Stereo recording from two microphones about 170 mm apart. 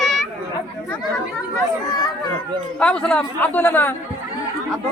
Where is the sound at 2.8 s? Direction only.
5° left (ahead or behind).